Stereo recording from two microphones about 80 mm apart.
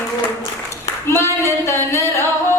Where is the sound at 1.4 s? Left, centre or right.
Left.